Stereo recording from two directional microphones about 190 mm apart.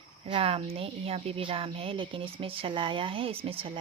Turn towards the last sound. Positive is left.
turn(degrees=-30)  # may be behind; listen again after turning